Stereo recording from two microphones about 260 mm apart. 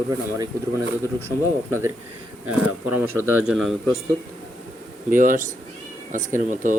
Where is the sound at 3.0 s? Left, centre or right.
Centre.